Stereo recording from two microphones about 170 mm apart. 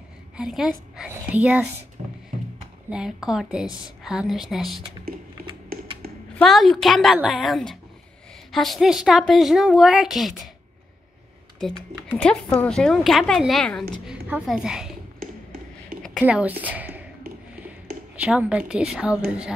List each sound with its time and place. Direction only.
0.4 s a woman's voice: centre (ahead or behind)
2.0 s music: 40° right (ahead or behind)
2.9 s a woman's voice: 5° right (ahead or behind)
5.0 s typing: 60° right (ahead or behind)
6.3 s a woman's voice: centre (ahead or behind)
11.6 s a woman's voice: 5° left (ahead or behind)
16.3 s speech: 10° right (ahead or behind)
18.2 s a woman's voice: 5° right (ahead or behind)